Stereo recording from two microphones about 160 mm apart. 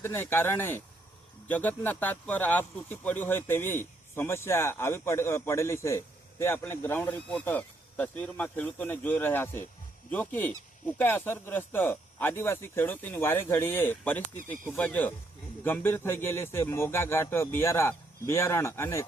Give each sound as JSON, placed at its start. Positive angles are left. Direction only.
{"t": 0.0, "sound": "speech", "side_deg": 15}